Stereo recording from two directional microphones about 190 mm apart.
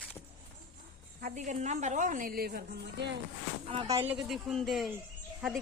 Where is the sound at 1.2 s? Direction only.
40° right (ahead or behind); by 3.2 s 65° right (ahead or behind).